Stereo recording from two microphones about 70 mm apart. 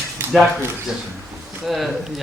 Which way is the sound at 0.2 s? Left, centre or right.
Right.